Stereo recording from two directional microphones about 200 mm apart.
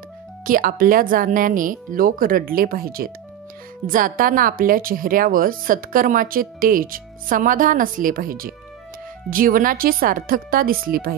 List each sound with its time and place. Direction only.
0.5 s a woman's voice: 45° right (ahead or behind)